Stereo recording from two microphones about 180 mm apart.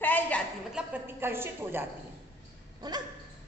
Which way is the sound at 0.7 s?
10° right (ahead or behind).